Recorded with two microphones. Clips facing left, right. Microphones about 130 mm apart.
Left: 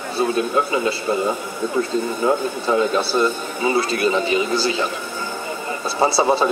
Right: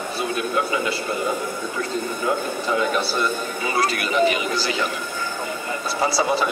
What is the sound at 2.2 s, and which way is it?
A man's voice, 30° left (ahead or behind).